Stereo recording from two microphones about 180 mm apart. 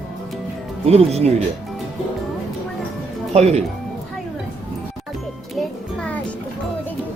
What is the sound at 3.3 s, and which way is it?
Speech, 35° right (ahead or behind).